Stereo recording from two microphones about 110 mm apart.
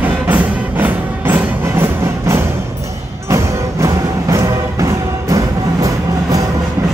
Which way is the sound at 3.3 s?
30° right (ahead or behind).